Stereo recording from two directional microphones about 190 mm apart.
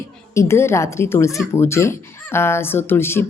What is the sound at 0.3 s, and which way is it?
A woman's voice, 15° left (ahead or behind).